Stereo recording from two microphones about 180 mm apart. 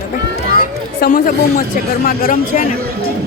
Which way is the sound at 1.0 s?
60° left (ahead or behind).